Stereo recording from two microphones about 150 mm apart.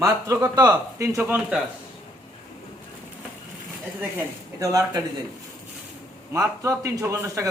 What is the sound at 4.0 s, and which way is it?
Speech, 20° right (ahead or behind).